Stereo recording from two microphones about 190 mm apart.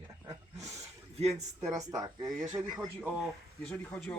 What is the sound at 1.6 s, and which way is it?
Speech, 20° right (ahead or behind).